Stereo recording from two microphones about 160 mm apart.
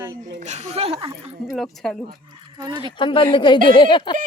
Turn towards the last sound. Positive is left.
turn(degrees=30)  # may be behind; listen again after turning